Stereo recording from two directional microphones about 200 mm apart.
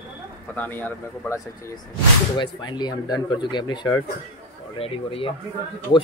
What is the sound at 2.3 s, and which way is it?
Speech, 25° left (ahead or behind).